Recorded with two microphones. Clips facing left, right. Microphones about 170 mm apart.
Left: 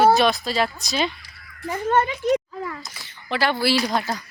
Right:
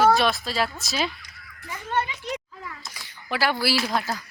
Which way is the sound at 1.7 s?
45° left (ahead or behind).